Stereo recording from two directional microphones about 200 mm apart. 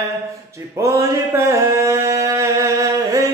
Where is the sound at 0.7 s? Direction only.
15° right (ahead or behind).